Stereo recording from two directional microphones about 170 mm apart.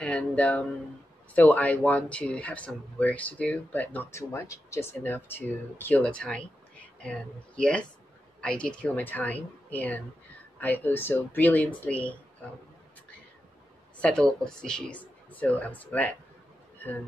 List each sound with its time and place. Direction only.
0.0 s speech: 5° left (ahead or behind)
13.9 s a woman's voice: 5° left (ahead or behind)